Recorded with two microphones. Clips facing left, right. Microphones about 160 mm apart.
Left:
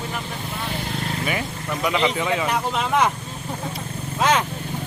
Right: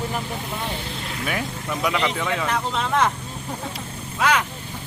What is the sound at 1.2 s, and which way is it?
Speech, centre (ahead or behind).